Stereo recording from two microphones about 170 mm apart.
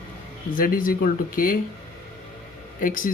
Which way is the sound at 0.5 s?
55° left (ahead or behind).